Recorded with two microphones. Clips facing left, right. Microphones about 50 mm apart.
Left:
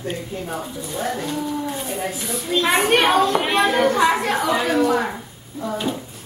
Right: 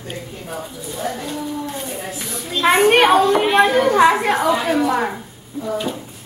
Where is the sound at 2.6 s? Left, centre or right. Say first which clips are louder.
Right 5 dB; centre.